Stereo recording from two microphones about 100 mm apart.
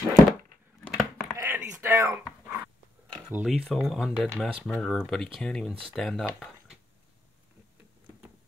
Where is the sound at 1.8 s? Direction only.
30° right (ahead or behind).